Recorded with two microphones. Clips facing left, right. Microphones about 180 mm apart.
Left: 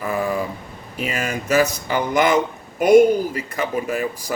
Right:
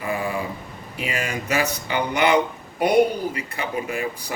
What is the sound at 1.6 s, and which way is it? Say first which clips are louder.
Speech: left 4 dB; 40° left (ahead or behind).